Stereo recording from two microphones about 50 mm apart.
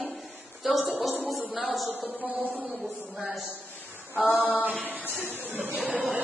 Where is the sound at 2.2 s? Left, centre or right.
Right.